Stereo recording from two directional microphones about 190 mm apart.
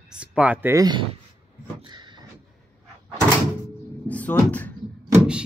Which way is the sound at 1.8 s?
25° right (ahead or behind).